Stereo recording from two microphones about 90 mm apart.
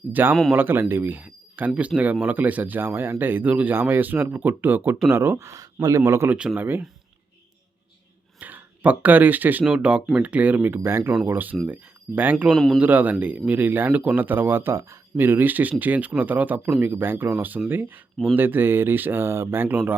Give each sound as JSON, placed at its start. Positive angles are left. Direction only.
{"t": 0.1, "sound": "speech", "side_deg": -20}
{"t": 8.4, "sound": "speech", "side_deg": -20}
{"t": 9.6, "sound": "speech", "side_deg": -10}
{"t": 12.5, "sound": "speech", "side_deg": 5}
{"t": 12.8, "sound": "speech", "side_deg": -20}